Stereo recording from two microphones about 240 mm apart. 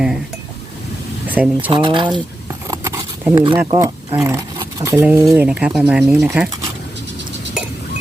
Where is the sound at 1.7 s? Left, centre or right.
Centre.